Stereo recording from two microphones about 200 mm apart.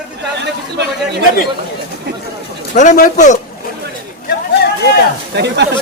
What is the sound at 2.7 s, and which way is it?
Speech, 40° left (ahead or behind).